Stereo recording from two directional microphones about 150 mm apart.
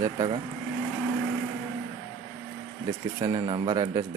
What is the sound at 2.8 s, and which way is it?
Speech, 30° right (ahead or behind).